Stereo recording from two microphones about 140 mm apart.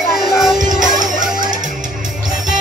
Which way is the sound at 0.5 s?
65° right (ahead or behind).